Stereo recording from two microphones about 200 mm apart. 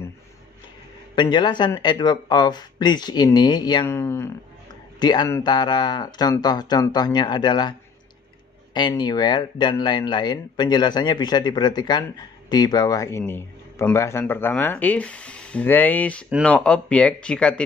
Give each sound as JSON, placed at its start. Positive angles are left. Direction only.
{"t": 1.1, "sound": "speech", "side_deg": 20}
{"t": 8.7, "sound": "speech", "side_deg": 20}
{"t": 16.3, "sound": "speech", "side_deg": -5}